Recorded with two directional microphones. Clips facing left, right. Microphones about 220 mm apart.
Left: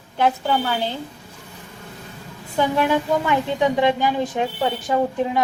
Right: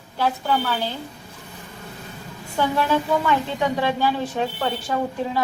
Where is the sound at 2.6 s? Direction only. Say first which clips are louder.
Left 2 dB; 15° left (ahead or behind).